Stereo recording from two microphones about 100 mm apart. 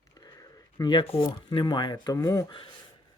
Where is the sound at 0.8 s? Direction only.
35° left (ahead or behind).